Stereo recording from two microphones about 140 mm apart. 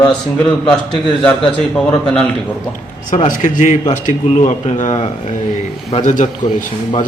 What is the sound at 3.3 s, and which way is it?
A man's voice, 65° left (ahead or behind).